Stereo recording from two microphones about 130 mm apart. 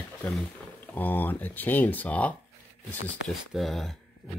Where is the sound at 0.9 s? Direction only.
15° left (ahead or behind).